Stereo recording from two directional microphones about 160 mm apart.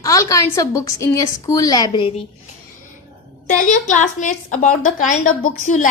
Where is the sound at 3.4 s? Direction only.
50° left (ahead or behind).